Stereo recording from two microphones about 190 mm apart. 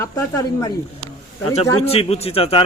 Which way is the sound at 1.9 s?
30° left (ahead or behind).